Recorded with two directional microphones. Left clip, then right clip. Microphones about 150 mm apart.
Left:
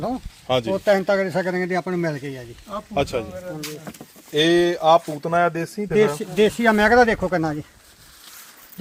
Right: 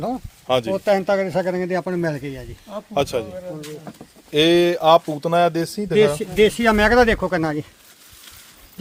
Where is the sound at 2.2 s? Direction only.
5° right (ahead or behind).